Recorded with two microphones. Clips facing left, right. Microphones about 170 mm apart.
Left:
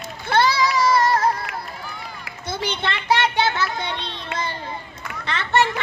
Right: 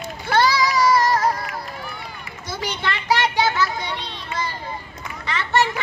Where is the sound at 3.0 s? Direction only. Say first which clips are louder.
Even; 25° left (ahead or behind).